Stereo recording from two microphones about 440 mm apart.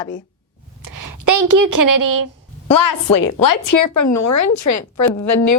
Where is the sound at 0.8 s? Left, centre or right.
Right.